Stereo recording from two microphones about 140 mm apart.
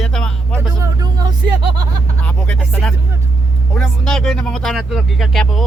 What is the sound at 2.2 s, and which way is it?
Speech, 10° left (ahead or behind).